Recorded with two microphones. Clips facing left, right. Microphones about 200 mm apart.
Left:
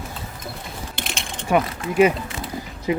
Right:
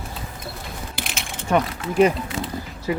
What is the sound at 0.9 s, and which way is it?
Pulleys, 5° right (ahead or behind).